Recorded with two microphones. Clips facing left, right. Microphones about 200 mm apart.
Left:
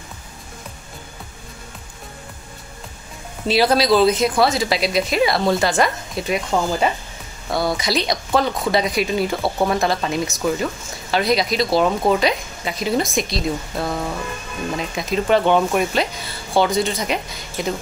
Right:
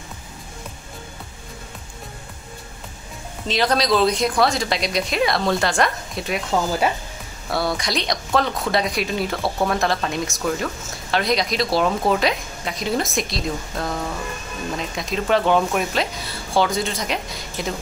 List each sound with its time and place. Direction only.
3.4 s speech: 10° left (ahead or behind)